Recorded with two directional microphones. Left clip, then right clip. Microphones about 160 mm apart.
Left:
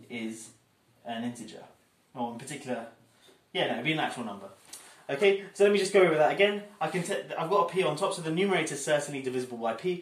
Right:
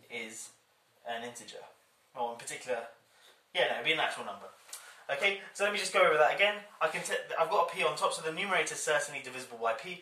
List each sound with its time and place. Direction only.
1.0 s speech: centre (ahead or behind)
4.6 s speech: 15° left (ahead or behind)